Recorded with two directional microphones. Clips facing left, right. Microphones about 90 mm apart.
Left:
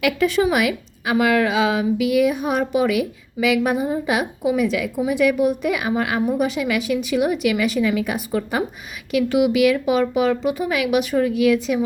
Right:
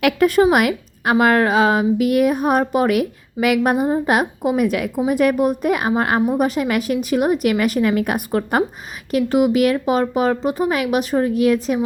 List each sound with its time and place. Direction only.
0.0 s a woman's voice: 50° right (ahead or behind)
9.1 s speech: 40° right (ahead or behind)